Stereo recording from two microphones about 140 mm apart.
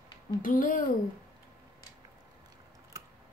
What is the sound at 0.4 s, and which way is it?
Speech, 75° left (ahead or behind).